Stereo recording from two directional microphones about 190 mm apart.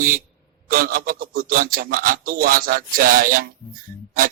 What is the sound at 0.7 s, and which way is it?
A man's voice, 50° right (ahead or behind).